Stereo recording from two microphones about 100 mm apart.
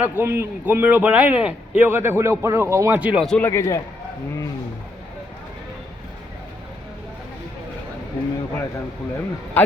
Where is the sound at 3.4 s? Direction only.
30° left (ahead or behind).